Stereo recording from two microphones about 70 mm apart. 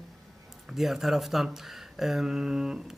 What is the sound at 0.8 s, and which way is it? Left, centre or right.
Speech, centre.